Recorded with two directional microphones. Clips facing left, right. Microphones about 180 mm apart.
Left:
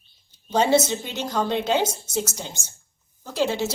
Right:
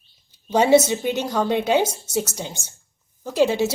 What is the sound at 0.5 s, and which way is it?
A woman's voice, 15° right (ahead or behind).